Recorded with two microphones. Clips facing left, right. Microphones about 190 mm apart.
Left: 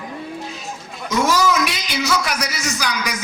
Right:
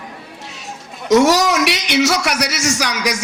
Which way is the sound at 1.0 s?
75° right (ahead or behind).